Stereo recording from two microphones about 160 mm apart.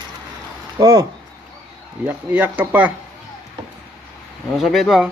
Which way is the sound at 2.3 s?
10° right (ahead or behind).